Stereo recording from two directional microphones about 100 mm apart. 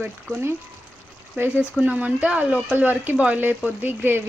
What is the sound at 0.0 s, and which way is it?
Speech, 20° right (ahead or behind).